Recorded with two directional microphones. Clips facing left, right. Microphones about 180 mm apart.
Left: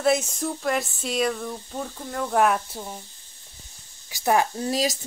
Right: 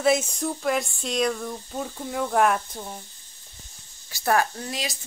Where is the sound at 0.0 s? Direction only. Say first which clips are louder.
Even; centre (ahead or behind).